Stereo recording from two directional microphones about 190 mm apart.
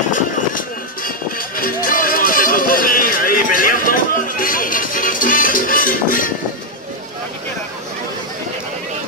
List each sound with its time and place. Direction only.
0.1 s run: 45° left (ahead or behind)
1.6 s music: 50° left (ahead or behind)